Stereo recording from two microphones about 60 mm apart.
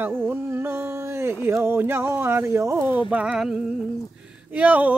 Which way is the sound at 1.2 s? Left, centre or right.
Right.